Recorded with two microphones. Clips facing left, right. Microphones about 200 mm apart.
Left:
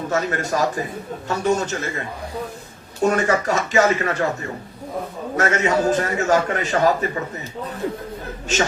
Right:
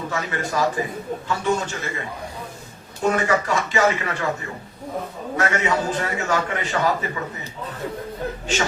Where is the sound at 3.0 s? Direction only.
45° left (ahead or behind).